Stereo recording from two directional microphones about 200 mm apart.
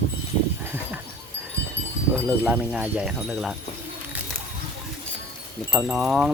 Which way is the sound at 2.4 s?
5° right (ahead or behind).